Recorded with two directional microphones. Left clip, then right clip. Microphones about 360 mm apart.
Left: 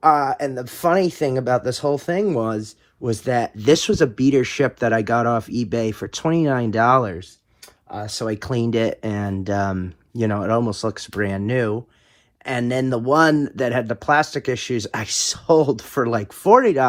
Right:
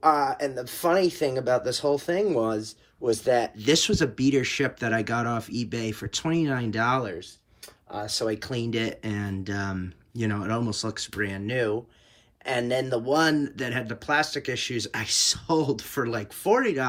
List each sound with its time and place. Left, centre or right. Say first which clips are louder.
0.0 s speech: left 6 dB; centre